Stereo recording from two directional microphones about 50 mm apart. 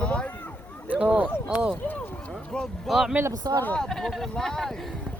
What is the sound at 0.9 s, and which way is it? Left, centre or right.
Speech, right.